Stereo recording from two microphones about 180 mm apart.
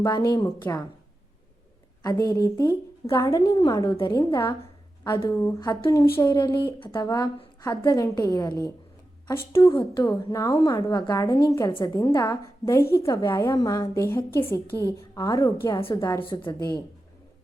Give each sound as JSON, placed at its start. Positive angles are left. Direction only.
{"t": 0.0, "sound": "a woman's voice", "side_deg": 20}
{"t": 2.2, "sound": "a woman's voice", "side_deg": 20}
{"t": 4.6, "sound": "a sound", "side_deg": 30}
{"t": 5.4, "sound": "a woman's voice", "side_deg": 20}
{"t": 14.8, "sound": "a woman's voice", "side_deg": -15}
{"t": 15.1, "sound": "a woman's voice", "side_deg": 20}